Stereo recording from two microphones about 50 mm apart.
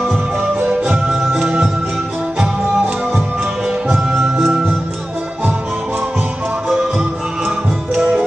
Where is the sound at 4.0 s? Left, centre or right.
Centre.